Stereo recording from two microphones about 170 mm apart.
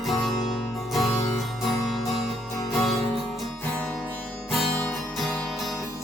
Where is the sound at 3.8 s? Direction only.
10° left (ahead or behind).